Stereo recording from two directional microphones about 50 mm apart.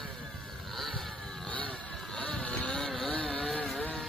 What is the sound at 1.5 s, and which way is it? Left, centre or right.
Vehicle, left.